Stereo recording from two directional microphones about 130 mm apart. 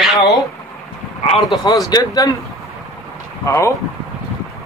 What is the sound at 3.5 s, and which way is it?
Speech, 20° left (ahead or behind).